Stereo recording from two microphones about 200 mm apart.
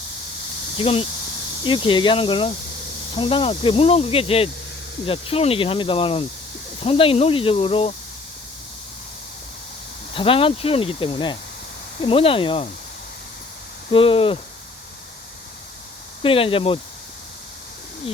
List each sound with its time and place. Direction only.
0.8 s snake: 30° left (ahead or behind)
10.2 s snake: 25° left (ahead or behind)
13.9 s snake: 25° left (ahead or behind)
16.2 s snake: 25° left (ahead or behind)